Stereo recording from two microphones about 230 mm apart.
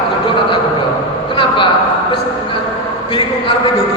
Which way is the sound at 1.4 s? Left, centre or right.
Left.